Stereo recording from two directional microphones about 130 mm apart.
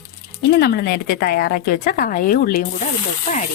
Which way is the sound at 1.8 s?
90° left.